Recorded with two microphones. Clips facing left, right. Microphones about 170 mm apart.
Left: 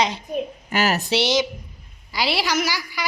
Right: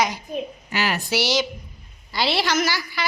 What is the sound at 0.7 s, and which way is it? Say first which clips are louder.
Speech: left 4 dB; 45° left (ahead or behind).